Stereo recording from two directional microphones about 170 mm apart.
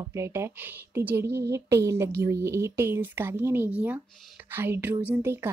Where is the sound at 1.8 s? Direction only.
15° right (ahead or behind).